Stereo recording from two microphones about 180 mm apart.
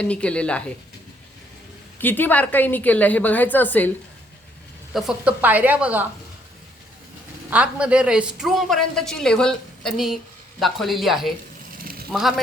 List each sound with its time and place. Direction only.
0.0 s a woman's voice: 5° left (ahead or behind)
2.0 s a woman's voice: 10° left (ahead or behind)
4.9 s speech: 5° right (ahead or behind)
7.5 s a woman's voice: 5° right (ahead or behind)
11.8 s a sound: 55° right (ahead or behind)